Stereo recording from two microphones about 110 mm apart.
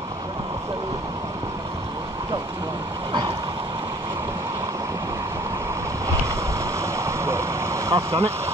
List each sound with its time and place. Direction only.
6.8 s vehicle: 25° right (ahead or behind)